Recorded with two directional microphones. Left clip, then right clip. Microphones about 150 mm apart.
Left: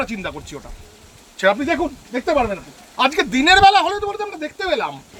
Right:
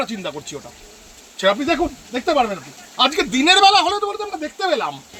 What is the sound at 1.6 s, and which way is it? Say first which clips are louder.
Speech: right 1 dB; centre (ahead or behind).